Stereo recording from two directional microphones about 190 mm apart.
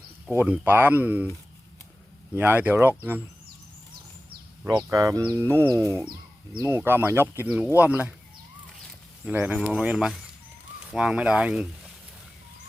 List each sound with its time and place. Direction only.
0.3 s speech: 5° right (ahead or behind)
2.3 s speech: 10° right (ahead or behind)
4.8 s speech: 15° right (ahead or behind)
9.2 s speech: 10° right (ahead or behind)